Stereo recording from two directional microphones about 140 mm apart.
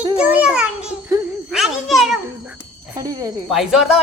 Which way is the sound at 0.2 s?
10° right (ahead or behind).